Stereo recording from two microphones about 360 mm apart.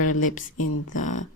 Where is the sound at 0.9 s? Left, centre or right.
Left.